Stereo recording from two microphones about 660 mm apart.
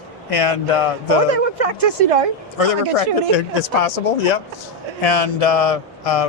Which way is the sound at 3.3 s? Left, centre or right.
Left.